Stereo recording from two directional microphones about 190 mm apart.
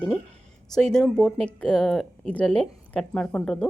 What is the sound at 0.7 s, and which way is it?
A woman's voice, 5° left (ahead or behind).